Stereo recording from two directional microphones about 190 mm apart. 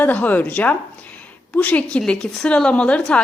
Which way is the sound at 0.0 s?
10° left (ahead or behind).